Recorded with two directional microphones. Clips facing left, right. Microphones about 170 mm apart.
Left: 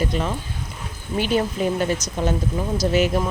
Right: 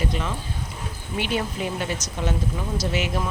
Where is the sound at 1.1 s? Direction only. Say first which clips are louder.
Left 5 dB; 40° left (ahead or behind).